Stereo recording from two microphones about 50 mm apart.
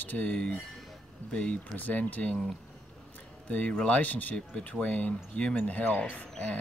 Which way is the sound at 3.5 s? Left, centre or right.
Left.